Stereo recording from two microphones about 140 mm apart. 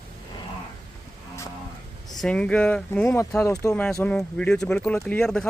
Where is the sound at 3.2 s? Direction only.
20° left (ahead or behind).